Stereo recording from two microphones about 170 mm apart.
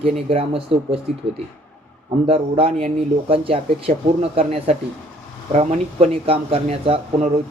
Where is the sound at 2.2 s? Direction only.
35° right (ahead or behind).